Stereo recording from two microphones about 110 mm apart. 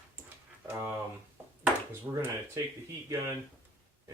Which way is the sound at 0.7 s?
20° right (ahead or behind).